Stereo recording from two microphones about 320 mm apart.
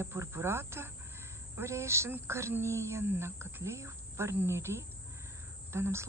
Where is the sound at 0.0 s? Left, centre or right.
Centre.